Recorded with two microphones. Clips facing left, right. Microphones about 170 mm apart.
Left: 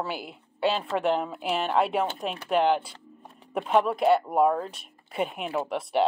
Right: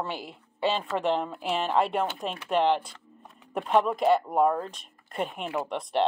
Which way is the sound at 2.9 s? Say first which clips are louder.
Left 3 dB; 30° left (ahead or behind).